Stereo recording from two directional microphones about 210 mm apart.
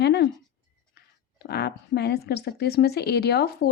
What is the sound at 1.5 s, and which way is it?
A woman's voice, 50° left (ahead or behind).